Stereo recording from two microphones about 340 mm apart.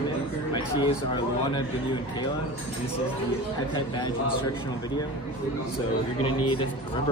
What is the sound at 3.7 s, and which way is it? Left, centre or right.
Speech, centre.